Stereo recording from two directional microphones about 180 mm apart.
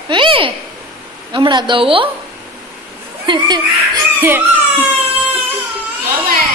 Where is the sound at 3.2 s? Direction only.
25° right (ahead or behind).